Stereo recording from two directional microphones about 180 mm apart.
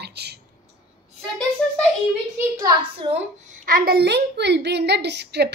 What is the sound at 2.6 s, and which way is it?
Speech, 25° right (ahead or behind).